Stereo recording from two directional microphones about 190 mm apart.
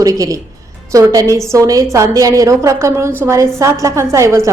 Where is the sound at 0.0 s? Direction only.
20° right (ahead or behind).